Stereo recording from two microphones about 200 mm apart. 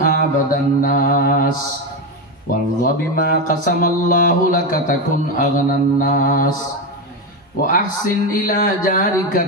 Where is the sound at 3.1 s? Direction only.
45° left (ahead or behind).